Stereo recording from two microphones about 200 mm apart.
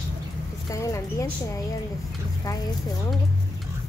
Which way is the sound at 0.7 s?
15° left (ahead or behind).